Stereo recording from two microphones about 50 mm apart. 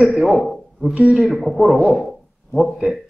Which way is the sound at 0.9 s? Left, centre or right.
Right.